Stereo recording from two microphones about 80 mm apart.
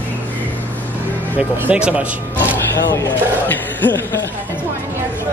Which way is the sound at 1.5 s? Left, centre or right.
Centre.